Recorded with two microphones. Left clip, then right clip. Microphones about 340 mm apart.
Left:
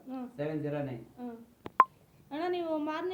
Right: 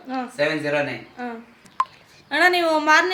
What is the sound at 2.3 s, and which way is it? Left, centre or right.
Speech, left.